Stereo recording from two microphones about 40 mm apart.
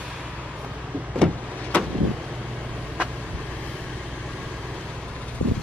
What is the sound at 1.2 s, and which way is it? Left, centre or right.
Vehicle, left.